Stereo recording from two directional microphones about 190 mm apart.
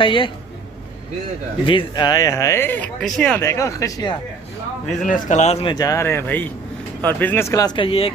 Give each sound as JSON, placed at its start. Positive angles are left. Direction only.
{"t": 0.0, "sound": "speech", "side_deg": 25}
{"t": 1.7, "sound": "speech", "side_deg": 25}
{"t": 3.3, "sound": "speech", "side_deg": 15}
{"t": 5.0, "sound": "speech", "side_deg": 40}